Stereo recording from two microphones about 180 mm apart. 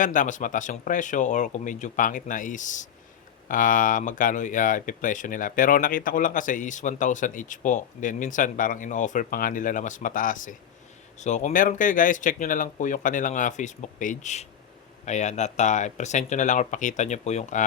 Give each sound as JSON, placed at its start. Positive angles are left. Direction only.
{"t": 0.0, "sound": "speech", "side_deg": 45}